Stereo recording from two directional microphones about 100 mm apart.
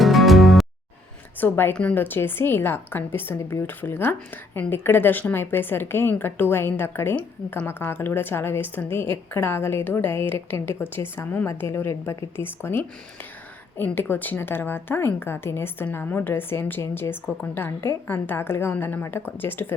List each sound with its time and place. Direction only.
0.0 s music: centre (ahead or behind)
1.4 s a woman's voice: 20° left (ahead or behind)